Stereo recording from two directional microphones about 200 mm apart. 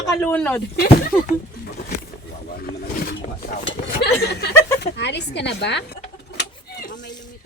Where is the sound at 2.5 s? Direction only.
50° left (ahead or behind).